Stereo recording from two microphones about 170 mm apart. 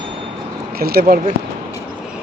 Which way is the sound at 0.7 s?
65° right (ahead or behind).